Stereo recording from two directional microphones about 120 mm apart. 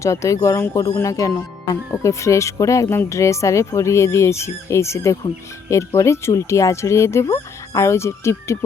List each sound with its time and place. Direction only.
0.0 s speech: 25° left (ahead or behind)